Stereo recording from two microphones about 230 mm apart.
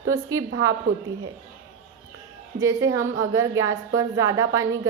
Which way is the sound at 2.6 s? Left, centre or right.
Centre.